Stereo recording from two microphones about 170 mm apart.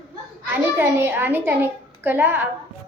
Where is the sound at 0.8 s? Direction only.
15° right (ahead or behind).